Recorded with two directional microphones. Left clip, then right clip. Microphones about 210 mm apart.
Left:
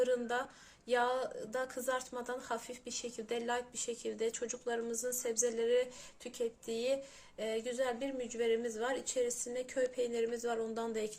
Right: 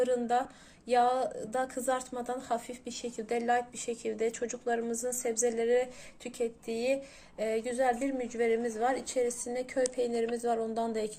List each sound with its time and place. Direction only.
0.0 s speech: centre (ahead or behind)